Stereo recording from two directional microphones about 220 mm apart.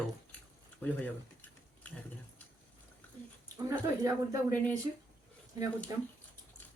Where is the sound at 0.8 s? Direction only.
5° left (ahead or behind).